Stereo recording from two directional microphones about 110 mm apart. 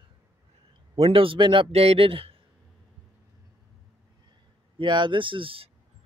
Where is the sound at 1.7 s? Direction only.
65° right (ahead or behind).